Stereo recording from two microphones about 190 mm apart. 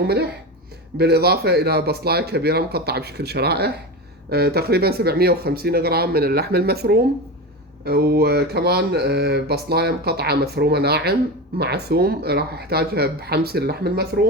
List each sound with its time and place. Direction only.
0.9 s speech: 55° right (ahead or behind)